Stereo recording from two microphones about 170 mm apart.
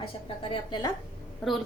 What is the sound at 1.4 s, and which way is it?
Speech, centre (ahead or behind).